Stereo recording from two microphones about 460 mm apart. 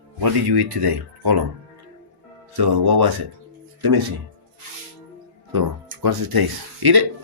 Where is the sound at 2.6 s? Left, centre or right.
Right.